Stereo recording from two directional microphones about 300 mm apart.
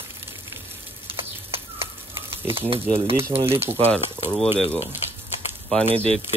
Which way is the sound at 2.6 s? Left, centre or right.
Centre.